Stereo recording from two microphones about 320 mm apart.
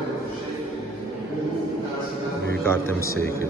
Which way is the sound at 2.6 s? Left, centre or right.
Centre.